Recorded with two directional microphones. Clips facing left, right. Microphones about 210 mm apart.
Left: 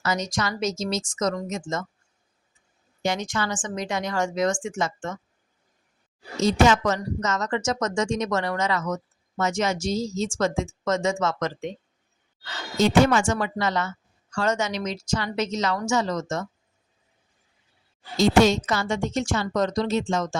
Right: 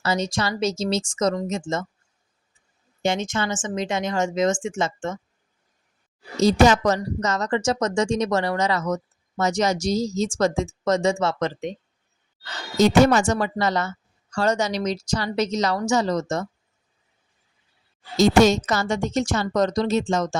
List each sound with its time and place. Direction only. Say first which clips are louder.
0.0 s speech: right 3 dB; 30° right (ahead or behind)
3.0 s speech: right 3 dB; 25° right (ahead or behind)
6.4 s a woman's voice: right 3 dB; 35° right (ahead or behind)
12.7 s a woman's voice: right 3 dB; 40° right (ahead or behind)
18.2 s a woman's voice: right 2 dB; 45° right (ahead or behind)